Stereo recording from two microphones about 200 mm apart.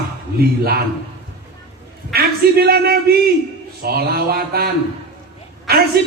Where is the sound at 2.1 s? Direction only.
50° right (ahead or behind).